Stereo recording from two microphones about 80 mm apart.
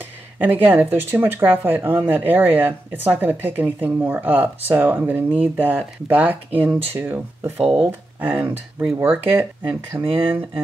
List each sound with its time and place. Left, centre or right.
0.4 s speech: right